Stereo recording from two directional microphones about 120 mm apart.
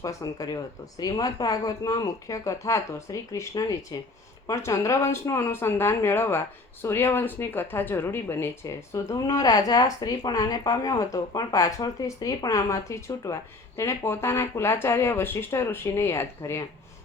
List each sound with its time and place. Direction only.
0.0 s speech: 30° left (ahead or behind)